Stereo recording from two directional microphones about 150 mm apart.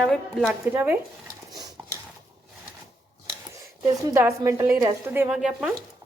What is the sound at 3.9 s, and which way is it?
A woman's voice, 20° right (ahead or behind).